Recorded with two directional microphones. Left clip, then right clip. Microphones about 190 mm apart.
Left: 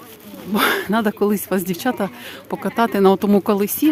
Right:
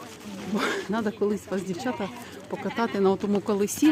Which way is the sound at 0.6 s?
50° left (ahead or behind).